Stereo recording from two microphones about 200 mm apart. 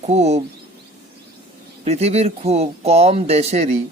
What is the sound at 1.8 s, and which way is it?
Speech, 30° right (ahead or behind).